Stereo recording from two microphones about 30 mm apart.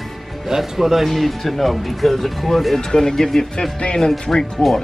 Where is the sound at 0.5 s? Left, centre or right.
Centre.